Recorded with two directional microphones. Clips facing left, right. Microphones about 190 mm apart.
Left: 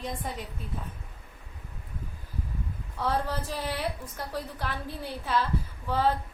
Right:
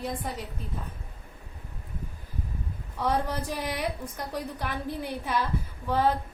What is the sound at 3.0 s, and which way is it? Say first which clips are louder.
A woman's voice: right 2 dB; 15° right (ahead or behind).